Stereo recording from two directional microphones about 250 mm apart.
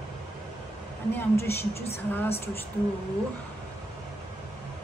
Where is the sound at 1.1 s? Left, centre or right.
Centre.